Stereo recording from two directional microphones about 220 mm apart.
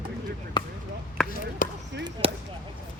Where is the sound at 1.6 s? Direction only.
40° left (ahead or behind).